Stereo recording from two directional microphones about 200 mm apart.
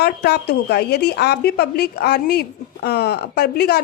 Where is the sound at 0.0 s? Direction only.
55° left (ahead or behind).